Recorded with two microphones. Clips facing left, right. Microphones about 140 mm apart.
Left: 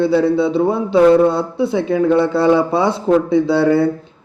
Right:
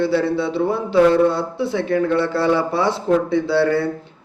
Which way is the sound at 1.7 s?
20° left (ahead or behind).